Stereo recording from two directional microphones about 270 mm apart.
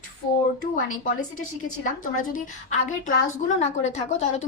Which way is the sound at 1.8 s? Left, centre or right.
Left.